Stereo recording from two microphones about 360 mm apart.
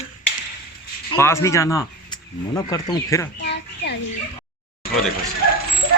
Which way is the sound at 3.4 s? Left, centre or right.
Left.